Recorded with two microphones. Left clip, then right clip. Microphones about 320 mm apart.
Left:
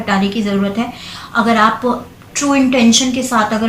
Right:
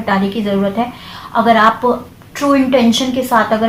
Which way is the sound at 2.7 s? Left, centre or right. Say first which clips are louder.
Even; right.